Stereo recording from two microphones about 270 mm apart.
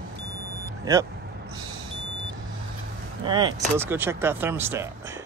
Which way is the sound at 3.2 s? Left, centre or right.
Centre.